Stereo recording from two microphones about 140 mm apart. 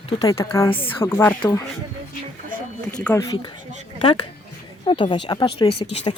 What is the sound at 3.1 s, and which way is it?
Speech, 30° left (ahead or behind).